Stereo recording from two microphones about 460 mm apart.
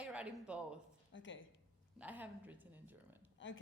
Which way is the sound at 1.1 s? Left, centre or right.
Left.